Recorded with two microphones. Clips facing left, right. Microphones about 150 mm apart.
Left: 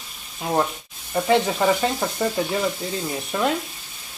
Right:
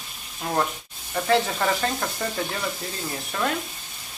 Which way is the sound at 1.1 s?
15° left (ahead or behind).